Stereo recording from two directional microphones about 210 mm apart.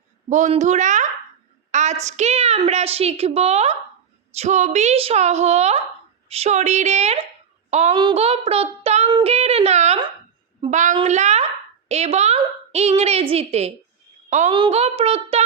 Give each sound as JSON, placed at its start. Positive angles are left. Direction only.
{"t": 0.3, "sound": "a woman's voice", "side_deg": -35}
{"t": 7.9, "sound": "child singing", "side_deg": -25}
{"t": 10.6, "sound": "a woman's voice", "side_deg": -35}